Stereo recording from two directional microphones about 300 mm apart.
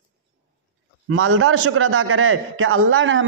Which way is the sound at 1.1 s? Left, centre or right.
Right.